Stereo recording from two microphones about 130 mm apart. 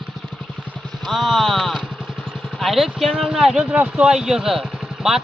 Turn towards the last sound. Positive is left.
turn(degrees=-5)  # may be behind; listen again after turning